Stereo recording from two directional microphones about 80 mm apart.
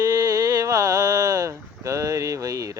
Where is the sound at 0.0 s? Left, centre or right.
Right.